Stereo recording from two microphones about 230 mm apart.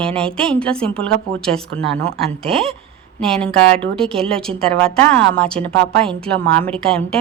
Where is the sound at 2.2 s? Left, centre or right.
Right.